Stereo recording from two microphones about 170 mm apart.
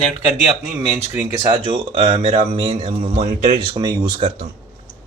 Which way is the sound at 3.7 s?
25° right (ahead or behind).